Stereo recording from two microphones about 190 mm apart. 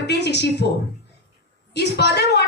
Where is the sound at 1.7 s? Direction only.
60° left (ahead or behind).